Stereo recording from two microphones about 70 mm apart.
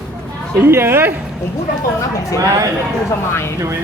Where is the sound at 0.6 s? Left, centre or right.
Right.